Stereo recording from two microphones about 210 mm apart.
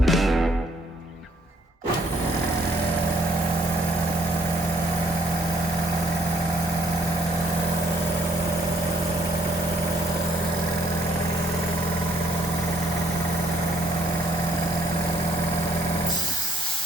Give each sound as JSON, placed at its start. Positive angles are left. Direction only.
{"t": 0.0, "sound": "music", "side_deg": 0}